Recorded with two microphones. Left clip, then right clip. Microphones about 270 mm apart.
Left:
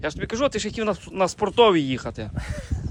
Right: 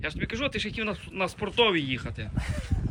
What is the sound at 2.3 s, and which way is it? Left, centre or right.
Speech, left.